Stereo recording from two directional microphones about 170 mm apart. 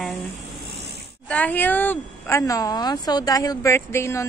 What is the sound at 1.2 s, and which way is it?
A woman's voice, 10° left (ahead or behind).